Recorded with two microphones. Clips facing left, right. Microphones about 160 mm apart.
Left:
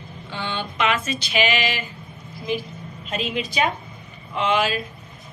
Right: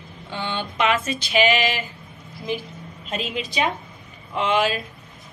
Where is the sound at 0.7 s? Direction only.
35° right (ahead or behind).